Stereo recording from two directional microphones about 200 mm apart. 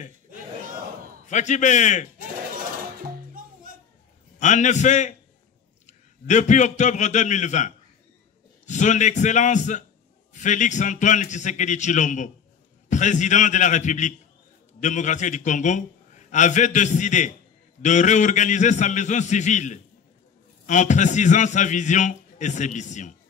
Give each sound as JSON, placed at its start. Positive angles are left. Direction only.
{"t": 1.2, "sound": "a man's voice", "side_deg": 35}
{"t": 4.4, "sound": "a man's voice", "side_deg": 35}